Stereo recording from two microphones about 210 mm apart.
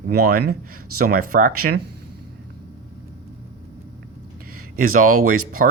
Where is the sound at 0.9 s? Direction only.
90° right.